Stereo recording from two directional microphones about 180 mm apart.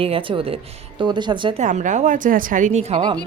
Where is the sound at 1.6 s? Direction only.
45° right (ahead or behind).